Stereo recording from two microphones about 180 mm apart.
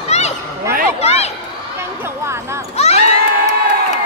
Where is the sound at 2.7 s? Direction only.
35° left (ahead or behind).